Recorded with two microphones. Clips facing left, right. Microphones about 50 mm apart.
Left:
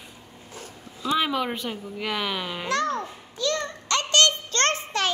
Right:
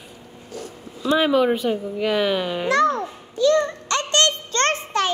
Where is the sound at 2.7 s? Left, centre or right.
Centre.